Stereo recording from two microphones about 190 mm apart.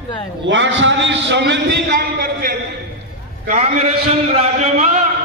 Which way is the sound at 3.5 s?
35° right (ahead or behind).